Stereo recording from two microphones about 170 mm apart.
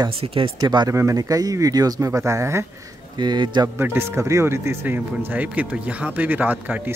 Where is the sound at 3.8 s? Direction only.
15° right (ahead or behind).